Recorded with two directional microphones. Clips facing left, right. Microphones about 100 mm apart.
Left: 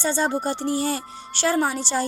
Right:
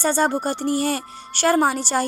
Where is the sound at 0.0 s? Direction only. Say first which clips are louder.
Right 3 dB; 50° right (ahead or behind).